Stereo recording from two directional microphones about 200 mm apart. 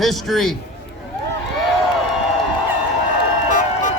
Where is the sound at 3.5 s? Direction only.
40° left (ahead or behind).